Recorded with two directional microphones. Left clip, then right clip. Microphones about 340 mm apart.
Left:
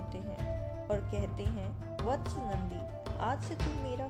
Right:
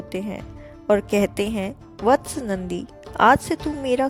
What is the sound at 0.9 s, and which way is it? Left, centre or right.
A woman's voice, right.